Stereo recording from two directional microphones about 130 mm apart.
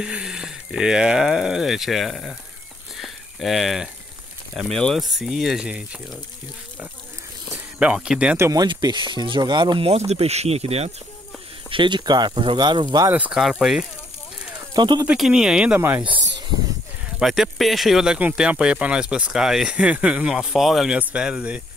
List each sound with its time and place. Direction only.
0.0 s speech: 5° right (ahead or behind)
3.0 s a sound: centre (ahead or behind)
4.6 s speech: 5° left (ahead or behind)
7.5 s speech: 10° right (ahead or behind)
8.4 s speech: 25° right (ahead or behind)
8.6 s speech: 35° right (ahead or behind); by 10.9 s 55° right (ahead or behind)
11.7 s speech: 35° right (ahead or behind)
13.1 s speech: 10° right (ahead or behind)
14.7 s speech: 30° right (ahead or behind)
15.0 s speech: 5° right (ahead or behind)
17.2 s speech: centre (ahead or behind)